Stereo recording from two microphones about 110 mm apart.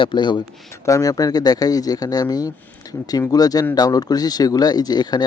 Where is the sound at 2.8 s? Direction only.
35° left (ahead or behind).